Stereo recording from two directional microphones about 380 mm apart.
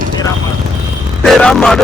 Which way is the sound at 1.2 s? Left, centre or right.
Centre.